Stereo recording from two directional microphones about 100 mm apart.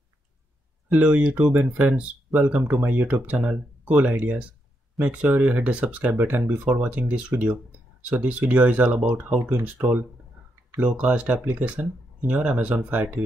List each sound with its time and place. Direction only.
0.9 s speech: 15° right (ahead or behind)